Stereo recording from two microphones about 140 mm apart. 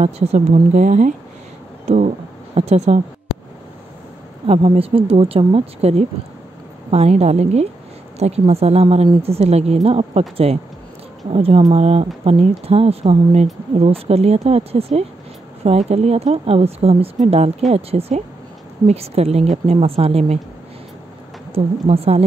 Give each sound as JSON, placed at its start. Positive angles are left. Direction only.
{"t": 0.0, "sound": "speech", "side_deg": -50}
{"t": 4.5, "sound": "speech", "side_deg": -45}
{"t": 21.5, "sound": "speech", "side_deg": -45}